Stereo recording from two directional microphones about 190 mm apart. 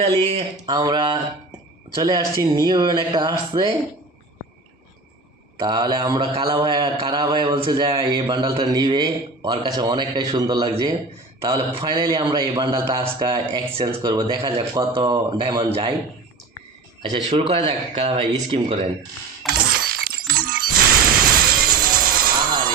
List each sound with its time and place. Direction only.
0.0 s a man's voice: 30° right (ahead or behind)
5.5 s a man's voice: 25° right (ahead or behind)
17.0 s speech: 30° right (ahead or behind)
19.5 s shatter: 50° right (ahead or behind)